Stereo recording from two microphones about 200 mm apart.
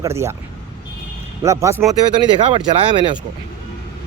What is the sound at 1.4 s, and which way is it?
Speech, 15° right (ahead or behind).